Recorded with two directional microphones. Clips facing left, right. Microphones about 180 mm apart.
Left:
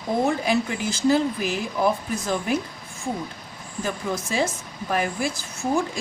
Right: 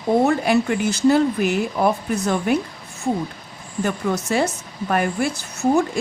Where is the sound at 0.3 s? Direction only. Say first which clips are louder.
Right 5 dB; 65° right (ahead or behind).